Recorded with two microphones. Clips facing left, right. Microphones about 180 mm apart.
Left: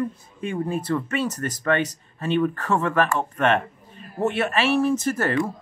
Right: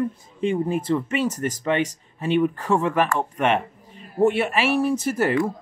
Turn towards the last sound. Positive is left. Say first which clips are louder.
# right 1 dB
turn(degrees=-15)  # may be behind; listen again after turning